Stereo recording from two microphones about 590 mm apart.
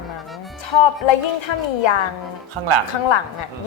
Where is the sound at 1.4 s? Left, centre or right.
Left.